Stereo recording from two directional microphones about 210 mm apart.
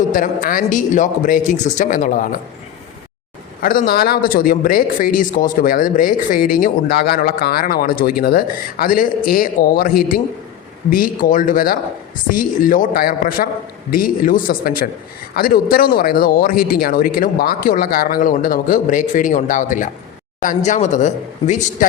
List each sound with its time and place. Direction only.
0.1 s a man's voice: 40° left (ahead or behind)
3.6 s a man's voice: 45° left (ahead or behind)